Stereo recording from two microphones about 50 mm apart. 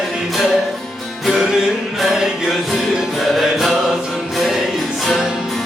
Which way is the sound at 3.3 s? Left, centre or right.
Centre.